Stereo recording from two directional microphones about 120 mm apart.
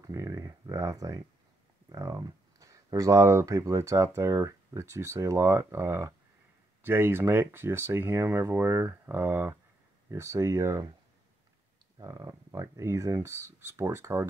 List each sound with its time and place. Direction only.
0.0 s a sound: 30° right (ahead or behind)
1.9 s speech: 30° right (ahead or behind)
12.0 s speech: 30° right (ahead or behind)